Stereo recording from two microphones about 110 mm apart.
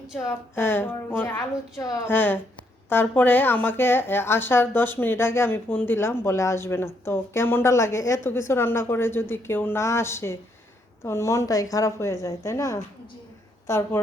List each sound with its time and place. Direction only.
0.5 s speech: 20° left (ahead or behind)